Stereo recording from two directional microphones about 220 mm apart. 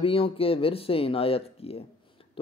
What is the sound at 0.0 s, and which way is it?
A man's voice, 25° left (ahead or behind).